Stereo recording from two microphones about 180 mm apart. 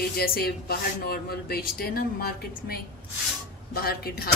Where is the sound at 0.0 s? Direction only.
60° left (ahead or behind).